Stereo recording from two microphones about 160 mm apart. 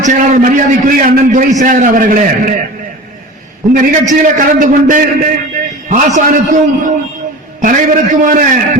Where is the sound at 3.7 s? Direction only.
55° right (ahead or behind).